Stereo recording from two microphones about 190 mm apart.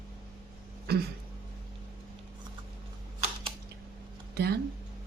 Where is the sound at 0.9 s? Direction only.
55° right (ahead or behind).